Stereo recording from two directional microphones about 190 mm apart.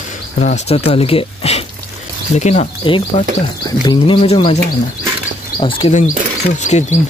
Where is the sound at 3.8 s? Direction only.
25° left (ahead or behind).